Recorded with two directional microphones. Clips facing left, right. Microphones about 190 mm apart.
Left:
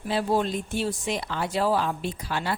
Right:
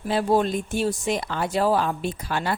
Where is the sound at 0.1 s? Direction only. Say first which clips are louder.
Right 3 dB; 50° right (ahead or behind).